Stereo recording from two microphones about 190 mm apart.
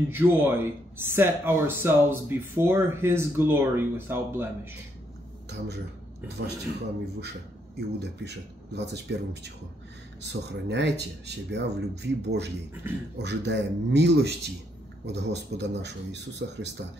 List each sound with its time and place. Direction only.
0.1 s speech: 10° right (ahead or behind)
6.4 s speech: 60° right (ahead or behind)
7.7 s speech: 60° right (ahead or behind)